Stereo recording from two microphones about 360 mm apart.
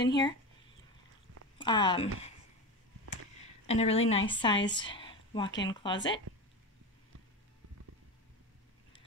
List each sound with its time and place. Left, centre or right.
0.0 s a woman's voice: centre
1.6 s a woman's voice: centre
3.6 s a woman's voice: centre
4.6 s a sound: centre
5.6 s a woman's voice: centre